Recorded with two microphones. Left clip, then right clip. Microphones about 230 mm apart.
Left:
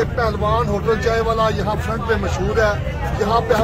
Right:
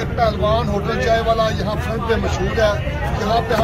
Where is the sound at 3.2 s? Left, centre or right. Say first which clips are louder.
Left 2 dB; left.